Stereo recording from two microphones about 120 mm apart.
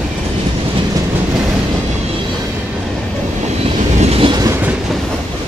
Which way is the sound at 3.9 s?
55° right (ahead or behind).